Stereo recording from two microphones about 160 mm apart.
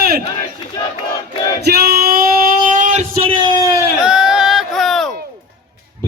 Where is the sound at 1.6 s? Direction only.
75° right (ahead or behind); by 3.8 s 25° right (ahead or behind).